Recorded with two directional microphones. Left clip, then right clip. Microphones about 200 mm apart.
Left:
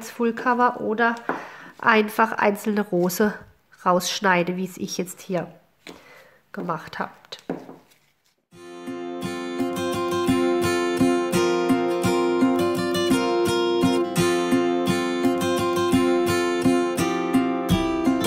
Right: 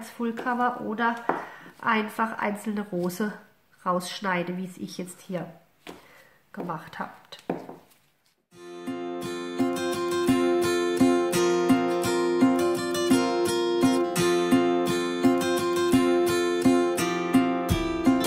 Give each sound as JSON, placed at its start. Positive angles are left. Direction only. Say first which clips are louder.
{"t": 0.0, "sound": "a woman's voice", "louder": "left 7 dB", "side_deg": 50}
{"t": 6.5, "sound": "speech", "louder": "left 5 dB", "side_deg": 45}
{"t": 8.6, "sound": "music", "louder": "left 1 dB", "side_deg": 0}